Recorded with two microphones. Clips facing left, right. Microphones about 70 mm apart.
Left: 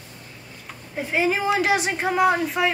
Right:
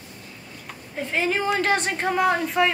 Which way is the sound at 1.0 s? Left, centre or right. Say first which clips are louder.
Left 2 dB; centre.